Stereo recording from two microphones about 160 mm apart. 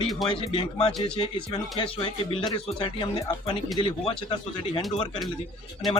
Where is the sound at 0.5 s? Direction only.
30° left (ahead or behind).